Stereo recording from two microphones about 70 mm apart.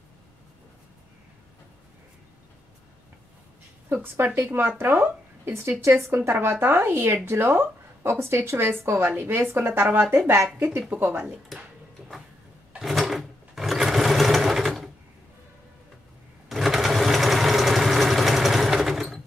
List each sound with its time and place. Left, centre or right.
3.9 s speech: right
12.7 s sewing machine: centre
16.4 s sewing machine: centre